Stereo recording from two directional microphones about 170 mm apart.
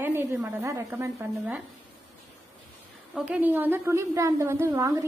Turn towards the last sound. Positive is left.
turn(degrees=-20)  # may be behind; listen again after turning